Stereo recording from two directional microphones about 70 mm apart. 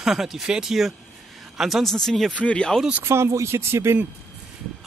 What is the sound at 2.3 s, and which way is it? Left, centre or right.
Speech, centre.